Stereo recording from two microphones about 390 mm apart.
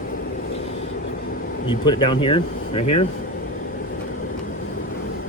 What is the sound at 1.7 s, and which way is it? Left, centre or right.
Speech, centre.